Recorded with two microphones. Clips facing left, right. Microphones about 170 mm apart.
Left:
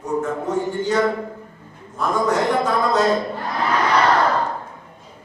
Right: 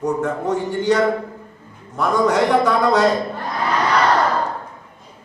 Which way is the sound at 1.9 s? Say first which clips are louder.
Right 3 dB; 70° right (ahead or behind).